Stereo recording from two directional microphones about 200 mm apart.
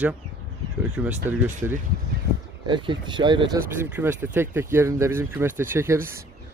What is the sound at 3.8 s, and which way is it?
Speech, 10° right (ahead or behind).